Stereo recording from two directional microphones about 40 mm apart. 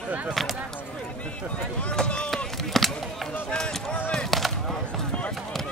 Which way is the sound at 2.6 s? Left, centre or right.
Centre.